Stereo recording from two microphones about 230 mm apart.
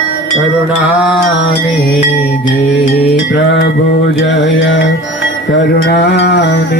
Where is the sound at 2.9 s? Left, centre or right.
Left.